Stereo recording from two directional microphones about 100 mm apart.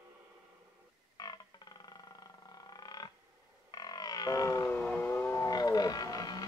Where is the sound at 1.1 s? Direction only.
40° left (ahead or behind).